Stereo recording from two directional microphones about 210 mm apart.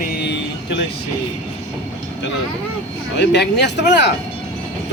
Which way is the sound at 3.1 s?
55° left (ahead or behind).